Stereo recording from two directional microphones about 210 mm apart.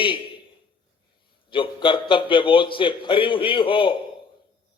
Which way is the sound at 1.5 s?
25° left (ahead or behind).